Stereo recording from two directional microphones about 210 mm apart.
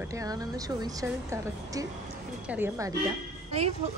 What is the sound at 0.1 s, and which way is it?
A woman's voice, 15° right (ahead or behind).